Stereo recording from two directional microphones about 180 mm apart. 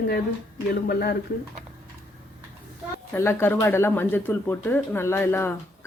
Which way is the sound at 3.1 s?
15° left (ahead or behind).